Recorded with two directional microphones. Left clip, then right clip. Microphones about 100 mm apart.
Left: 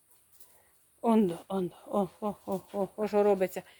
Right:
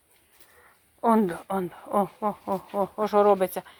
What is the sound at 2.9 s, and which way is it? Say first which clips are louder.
Speech: right 6 dB; centre (ahead or behind).